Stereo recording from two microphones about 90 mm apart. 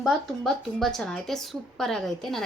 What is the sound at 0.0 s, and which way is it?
A woman's voice, 5° left (ahead or behind).